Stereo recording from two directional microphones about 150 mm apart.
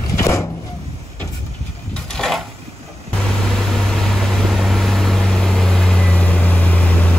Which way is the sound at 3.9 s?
Centre (ahead or behind).